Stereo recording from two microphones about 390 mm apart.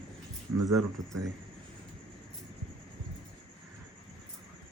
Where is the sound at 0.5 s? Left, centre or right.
Right.